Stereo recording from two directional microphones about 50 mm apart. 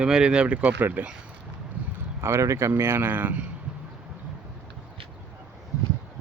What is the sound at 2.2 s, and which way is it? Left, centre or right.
Speech, right.